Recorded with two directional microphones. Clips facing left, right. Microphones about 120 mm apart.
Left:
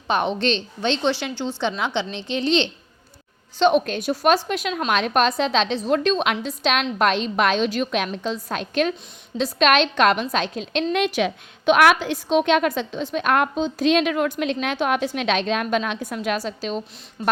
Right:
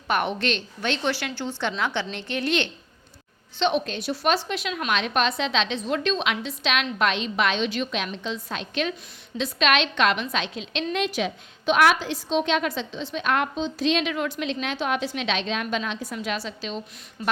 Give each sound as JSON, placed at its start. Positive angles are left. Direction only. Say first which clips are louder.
{"t": 0.1, "sound": "a woman's voice", "louder": "left 3 dB", "side_deg": 20}
{"t": 3.6, "sound": "a woman's voice", "louder": "left 6 dB", "side_deg": 45}
{"t": 10.9, "sound": "a woman's voice", "louder": "left 3 dB", "side_deg": 65}